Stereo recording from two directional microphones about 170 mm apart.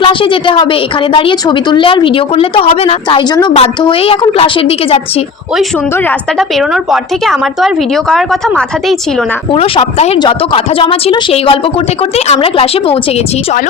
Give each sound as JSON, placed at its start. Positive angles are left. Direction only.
{"t": 0.0, "sound": "a woman's voice", "side_deg": 30}
{"t": 6.6, "sound": "a woman's voice", "side_deg": 0}
{"t": 9.5, "sound": "a woman's voice", "side_deg": 35}